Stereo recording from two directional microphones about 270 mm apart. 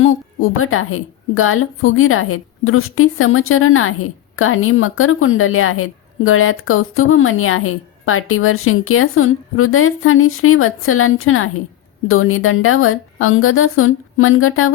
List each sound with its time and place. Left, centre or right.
0.0 s a woman's voice: left